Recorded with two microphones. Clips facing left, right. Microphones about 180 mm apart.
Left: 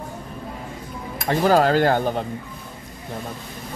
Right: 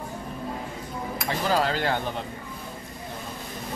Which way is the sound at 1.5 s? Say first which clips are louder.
Left 8 dB; 50° left (ahead or behind).